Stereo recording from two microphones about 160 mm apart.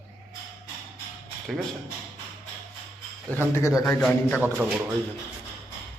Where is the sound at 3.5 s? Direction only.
15° left (ahead or behind).